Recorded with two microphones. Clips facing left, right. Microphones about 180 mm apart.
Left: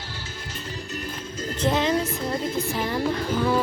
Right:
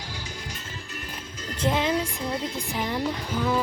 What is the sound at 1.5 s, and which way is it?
Speech, 10° right (ahead or behind).